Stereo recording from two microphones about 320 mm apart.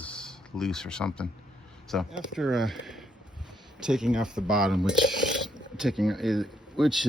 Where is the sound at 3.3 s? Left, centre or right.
Centre.